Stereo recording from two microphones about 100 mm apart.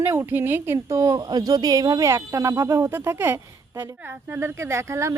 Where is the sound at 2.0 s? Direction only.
30° right (ahead or behind).